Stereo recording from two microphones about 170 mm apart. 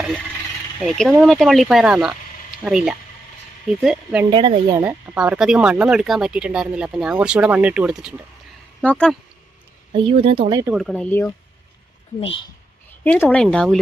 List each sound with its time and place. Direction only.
0.9 s speech: centre (ahead or behind)
4.3 s speech: 30° right (ahead or behind)
4.8 s speech: 10° right (ahead or behind)
8.8 s speech: 5° left (ahead or behind)
9.9 s speech: 30° right (ahead or behind)
10.8 s speech: 5° left (ahead or behind)
12.2 s a woman's voice: 30° left (ahead or behind)
13.1 s speech: 10° left (ahead or behind)